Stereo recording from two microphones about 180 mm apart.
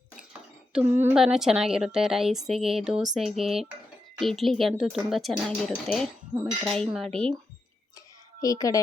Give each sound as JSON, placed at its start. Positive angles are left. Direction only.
{"t": 0.9, "sound": "a woman's voice", "side_deg": -5}
{"t": 8.4, "sound": "a child's voice", "side_deg": 20}